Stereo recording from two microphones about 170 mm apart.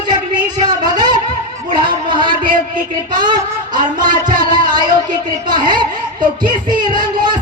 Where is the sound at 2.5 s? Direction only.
55° right (ahead or behind).